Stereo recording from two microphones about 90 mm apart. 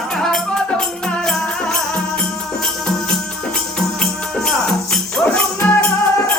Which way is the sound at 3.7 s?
5° left (ahead or behind).